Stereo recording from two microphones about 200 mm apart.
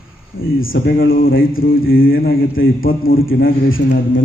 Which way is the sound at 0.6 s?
45° left (ahead or behind).